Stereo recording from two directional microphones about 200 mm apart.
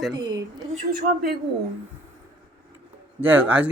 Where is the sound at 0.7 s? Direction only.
50° right (ahead or behind).